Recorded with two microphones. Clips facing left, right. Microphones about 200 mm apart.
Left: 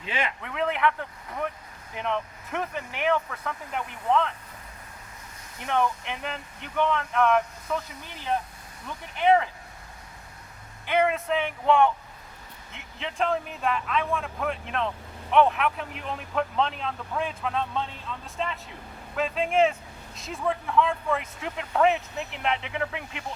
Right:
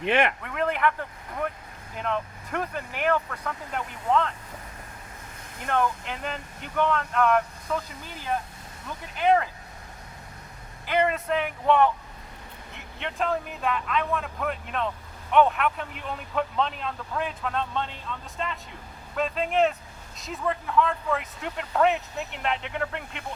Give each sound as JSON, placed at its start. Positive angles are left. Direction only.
{"t": 0.0, "sound": "speech", "side_deg": -65}
{"t": 0.4, "sound": "vehicle", "side_deg": 0}
{"t": 2.0, "sound": "speech", "side_deg": 0}
{"t": 5.7, "sound": "speech", "side_deg": 0}
{"t": 10.8, "sound": "speech", "side_deg": 0}